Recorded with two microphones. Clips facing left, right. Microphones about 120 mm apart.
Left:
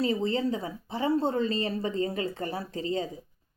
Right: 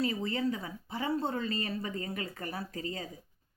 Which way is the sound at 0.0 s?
30° left (ahead or behind).